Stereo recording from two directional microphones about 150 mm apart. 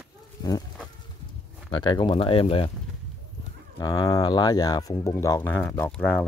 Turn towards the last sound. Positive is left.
turn(degrees=10)  # may be behind; listen again after turning